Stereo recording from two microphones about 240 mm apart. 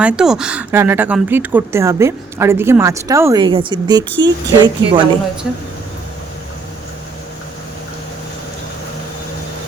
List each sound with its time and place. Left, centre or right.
0.0 s speech: centre